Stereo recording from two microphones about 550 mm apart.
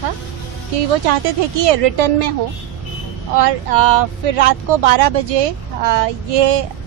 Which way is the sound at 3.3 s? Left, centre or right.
Right.